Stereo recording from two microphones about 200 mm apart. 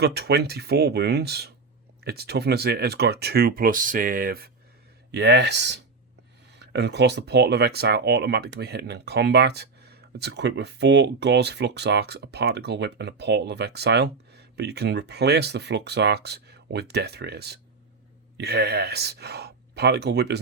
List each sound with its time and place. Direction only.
0.0 s speech: 55° right (ahead or behind)